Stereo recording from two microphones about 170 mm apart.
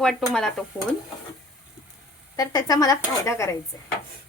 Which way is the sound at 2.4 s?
20° left (ahead or behind).